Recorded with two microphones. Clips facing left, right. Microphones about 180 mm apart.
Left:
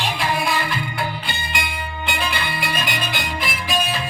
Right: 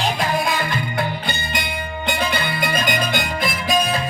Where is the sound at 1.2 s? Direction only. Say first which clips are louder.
Right 2 dB; 40° right (ahead or behind).